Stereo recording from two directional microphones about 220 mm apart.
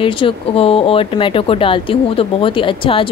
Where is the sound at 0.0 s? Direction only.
25° left (ahead or behind).